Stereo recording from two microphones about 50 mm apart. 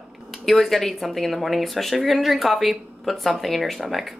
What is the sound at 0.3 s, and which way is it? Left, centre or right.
Speech, centre.